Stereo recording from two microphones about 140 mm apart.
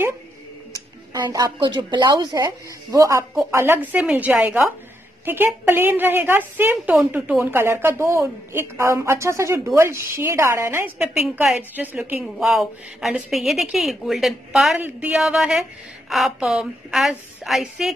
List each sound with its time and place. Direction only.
1.1 s a woman's voice: 30° right (ahead or behind)
11.0 s a woman's voice: centre (ahead or behind)